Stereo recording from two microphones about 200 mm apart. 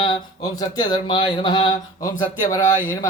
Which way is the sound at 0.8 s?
20° left (ahead or behind).